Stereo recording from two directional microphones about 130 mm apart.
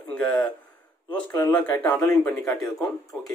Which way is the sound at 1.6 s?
15° left (ahead or behind).